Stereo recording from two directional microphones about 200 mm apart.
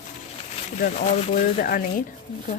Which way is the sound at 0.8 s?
40° left (ahead or behind).